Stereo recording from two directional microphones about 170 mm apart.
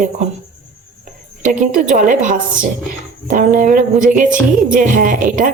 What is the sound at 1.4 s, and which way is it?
A woman's voice, 50° right (ahead or behind).